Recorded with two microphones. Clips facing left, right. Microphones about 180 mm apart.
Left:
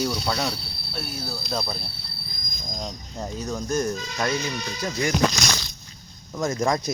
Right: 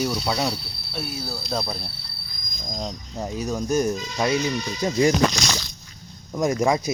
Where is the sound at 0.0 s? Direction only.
10° right (ahead or behind).